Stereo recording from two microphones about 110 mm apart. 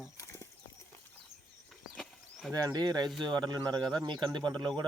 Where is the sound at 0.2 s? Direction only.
25° left (ahead or behind).